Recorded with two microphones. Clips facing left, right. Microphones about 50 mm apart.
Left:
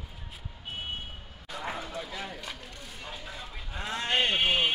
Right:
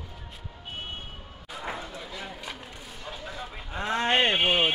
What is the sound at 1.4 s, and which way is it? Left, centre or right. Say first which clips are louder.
Bow-wow: even; centre.